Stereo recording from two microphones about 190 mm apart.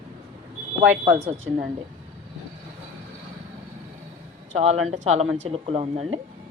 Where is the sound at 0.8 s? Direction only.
10° right (ahead or behind).